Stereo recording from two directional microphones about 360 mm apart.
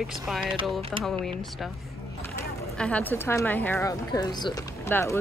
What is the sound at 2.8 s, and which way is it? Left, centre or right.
A woman's voice, centre.